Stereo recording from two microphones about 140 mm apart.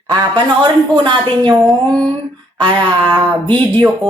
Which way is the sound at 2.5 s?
30° right (ahead or behind).